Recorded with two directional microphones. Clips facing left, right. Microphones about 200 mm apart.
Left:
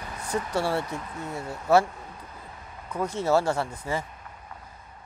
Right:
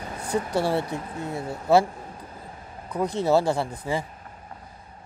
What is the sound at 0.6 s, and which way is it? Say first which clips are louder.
Speech: right 2 dB; 15° right (ahead or behind).